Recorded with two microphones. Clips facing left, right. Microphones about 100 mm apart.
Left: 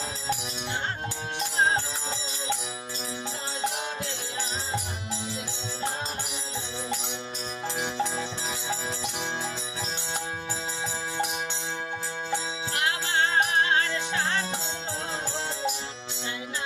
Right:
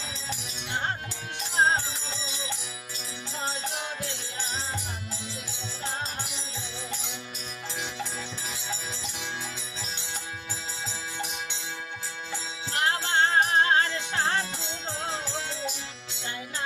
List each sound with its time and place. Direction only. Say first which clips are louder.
12.7 s music: right 2 dB; 35° right (ahead or behind)